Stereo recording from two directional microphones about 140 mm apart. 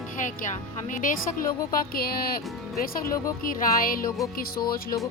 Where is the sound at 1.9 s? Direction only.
90° left.